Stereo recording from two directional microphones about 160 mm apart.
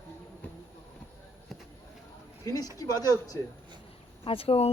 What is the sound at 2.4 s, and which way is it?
Speech, 25° left (ahead or behind).